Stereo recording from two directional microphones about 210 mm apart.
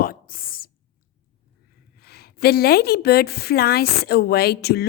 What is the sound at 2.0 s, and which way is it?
Speech, 50° left (ahead or behind).